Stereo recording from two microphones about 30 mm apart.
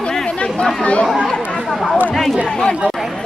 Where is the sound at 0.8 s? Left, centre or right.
Left.